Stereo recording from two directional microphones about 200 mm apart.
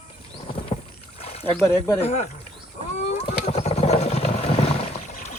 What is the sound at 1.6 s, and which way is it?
Speech, 10° left (ahead or behind).